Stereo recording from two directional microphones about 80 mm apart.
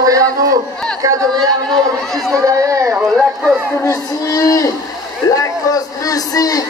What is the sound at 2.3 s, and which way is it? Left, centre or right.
Speech, right.